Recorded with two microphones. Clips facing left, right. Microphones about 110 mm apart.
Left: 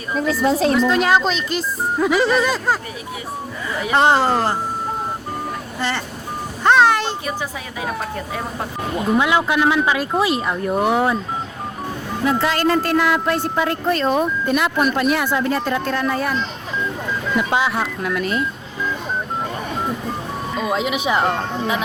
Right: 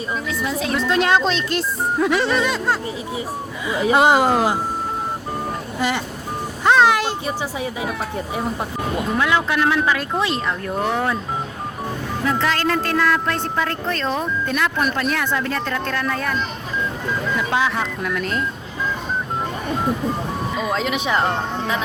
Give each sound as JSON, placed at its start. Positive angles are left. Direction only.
{"t": 0.4, "sound": "speech", "side_deg": 35}
{"t": 0.8, "sound": "speech", "side_deg": 0}
{"t": 3.9, "sound": "speech", "side_deg": -5}
{"t": 6.7, "sound": "a sound", "side_deg": 0}
{"t": 9.1, "sound": "a woman's voice", "side_deg": 15}
{"t": 12.2, "sound": "a woman's voice", "side_deg": 15}
{"t": 20.6, "sound": "a woman's voice", "side_deg": 5}